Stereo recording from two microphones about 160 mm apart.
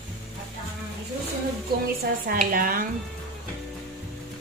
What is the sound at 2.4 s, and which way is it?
Music, 60° right (ahead or behind).